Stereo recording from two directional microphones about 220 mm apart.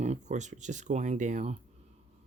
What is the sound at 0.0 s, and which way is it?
Speech, 30° right (ahead or behind).